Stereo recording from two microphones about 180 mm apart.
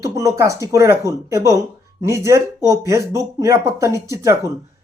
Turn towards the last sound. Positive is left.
turn(degrees=-15)  # may be behind; listen again after turning